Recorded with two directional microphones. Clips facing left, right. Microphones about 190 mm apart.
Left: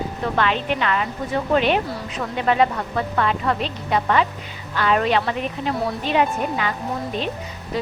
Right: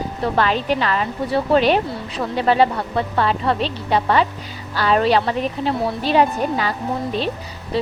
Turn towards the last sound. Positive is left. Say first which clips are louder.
# right 4 dB
turn(degrees=-30)  # may be behind; listen again after turning